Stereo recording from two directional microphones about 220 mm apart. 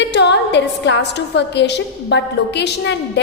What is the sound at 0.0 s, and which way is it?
A woman's voice, 50° left (ahead or behind).